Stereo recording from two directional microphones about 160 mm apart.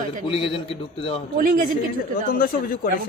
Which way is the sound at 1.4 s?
60° right (ahead or behind).